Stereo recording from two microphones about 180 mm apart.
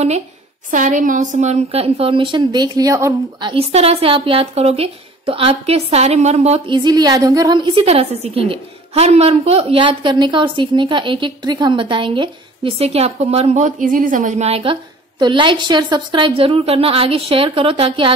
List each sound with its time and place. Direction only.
0.7 s a woman's voice: 45° right (ahead or behind)
6.8 s a woman's voice: 25° right (ahead or behind)